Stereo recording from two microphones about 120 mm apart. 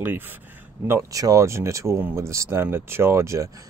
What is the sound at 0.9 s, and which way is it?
Speech, 25° right (ahead or behind).